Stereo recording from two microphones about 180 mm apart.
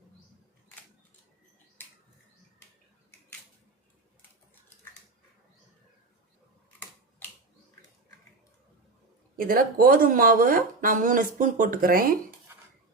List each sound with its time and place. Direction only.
9.3 s speech: 55° right (ahead or behind)